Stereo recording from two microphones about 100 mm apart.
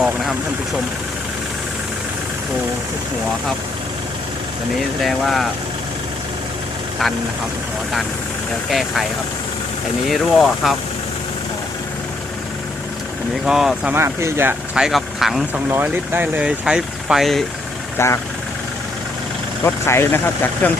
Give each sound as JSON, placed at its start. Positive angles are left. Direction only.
{"t": 0.0, "sound": "speech", "side_deg": 0}
{"t": 4.8, "sound": "speech", "side_deg": 0}
{"t": 10.1, "sound": "speech", "side_deg": 0}
{"t": 13.4, "sound": "speech", "side_deg": -5}
{"t": 13.9, "sound": "speech", "side_deg": -25}
{"t": 14.8, "sound": "speech", "side_deg": -5}
{"t": 15.5, "sound": "speech", "side_deg": -20}
{"t": 17.9, "sound": "speech", "side_deg": 25}
{"t": 19.6, "sound": "speech", "side_deg": 25}